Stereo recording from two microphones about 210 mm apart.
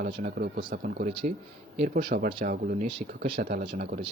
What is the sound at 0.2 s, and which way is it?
Speech, 45° right (ahead or behind).